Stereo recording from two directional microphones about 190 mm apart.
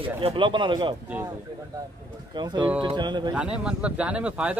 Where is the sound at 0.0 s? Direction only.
30° right (ahead or behind).